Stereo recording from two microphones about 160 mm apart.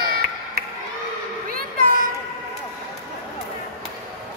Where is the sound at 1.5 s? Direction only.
60° right (ahead or behind).